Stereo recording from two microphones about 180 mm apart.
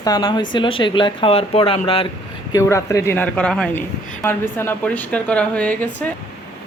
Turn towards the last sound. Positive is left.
turn(degrees=10)  # may be behind; listen again after turning